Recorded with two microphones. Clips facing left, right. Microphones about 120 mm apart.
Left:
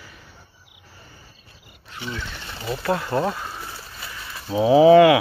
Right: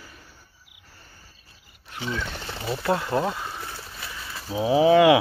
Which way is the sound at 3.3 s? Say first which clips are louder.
Left 1 dB; centre (ahead or behind).